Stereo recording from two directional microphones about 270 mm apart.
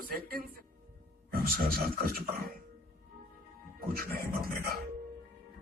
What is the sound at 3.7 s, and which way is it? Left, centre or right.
Speech, right.